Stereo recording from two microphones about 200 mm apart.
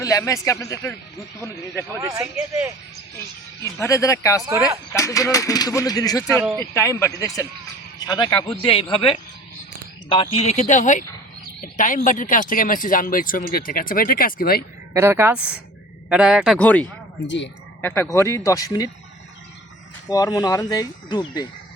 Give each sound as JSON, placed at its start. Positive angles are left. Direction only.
{"t": 0.0, "sound": "speech", "side_deg": 15}
{"t": 2.0, "sound": "speech", "side_deg": -15}
{"t": 3.6, "sound": "speech", "side_deg": 15}
{"t": 10.1, "sound": "speech", "side_deg": 30}
{"t": 14.9, "sound": "a man's voice", "side_deg": -10}
{"t": 16.6, "sound": "speech", "side_deg": 5}
{"t": 17.2, "sound": "speech", "side_deg": 65}
{"t": 17.8, "sound": "speech", "side_deg": 10}
{"t": 20.1, "sound": "speech", "side_deg": 20}